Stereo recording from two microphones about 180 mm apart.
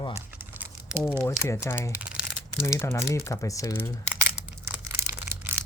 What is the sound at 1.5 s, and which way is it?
Speech, 15° left (ahead or behind).